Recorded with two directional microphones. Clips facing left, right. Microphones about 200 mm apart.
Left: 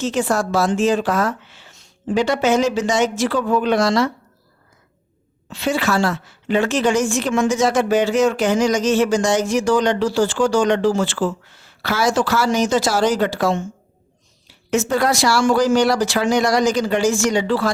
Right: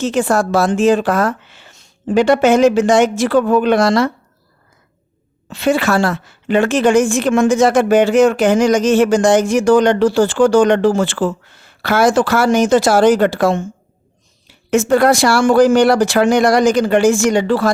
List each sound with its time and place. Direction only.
0.0 s a woman's voice: 55° right (ahead or behind)
5.5 s a woman's voice: 55° right (ahead or behind)